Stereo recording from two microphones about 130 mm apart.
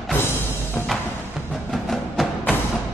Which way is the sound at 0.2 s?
20° left (ahead or behind).